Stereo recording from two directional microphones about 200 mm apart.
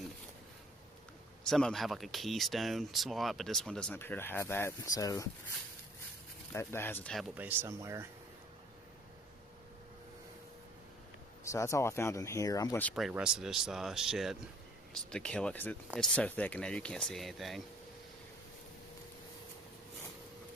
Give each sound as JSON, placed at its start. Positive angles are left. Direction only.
{"t": 1.5, "sound": "speech", "side_deg": 0}
{"t": 6.5, "sound": "speech", "side_deg": 10}
{"t": 7.3, "sound": "speech", "side_deg": -10}
{"t": 11.4, "sound": "speech", "side_deg": 15}
{"t": 13.0, "sound": "speech", "side_deg": -5}